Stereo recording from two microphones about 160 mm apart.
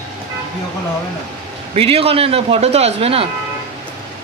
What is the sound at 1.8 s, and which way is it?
Speech, 35° right (ahead or behind).